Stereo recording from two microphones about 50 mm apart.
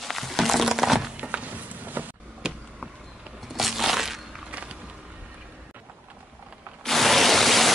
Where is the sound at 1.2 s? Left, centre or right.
Right.